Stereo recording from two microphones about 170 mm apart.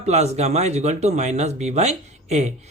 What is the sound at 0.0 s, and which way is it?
Speech, 40° right (ahead or behind).